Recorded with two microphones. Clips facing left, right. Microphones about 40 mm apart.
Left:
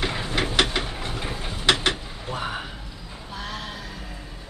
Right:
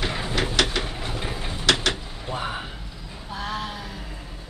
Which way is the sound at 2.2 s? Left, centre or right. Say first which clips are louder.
Even; centre.